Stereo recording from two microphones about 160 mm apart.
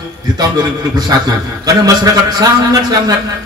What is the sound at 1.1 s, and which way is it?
Mantra, 20° right (ahead or behind).